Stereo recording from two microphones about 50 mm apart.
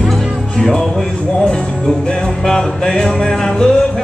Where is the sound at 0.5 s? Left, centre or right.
Centre.